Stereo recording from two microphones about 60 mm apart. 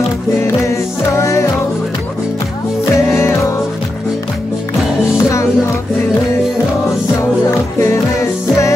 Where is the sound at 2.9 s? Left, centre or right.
Left.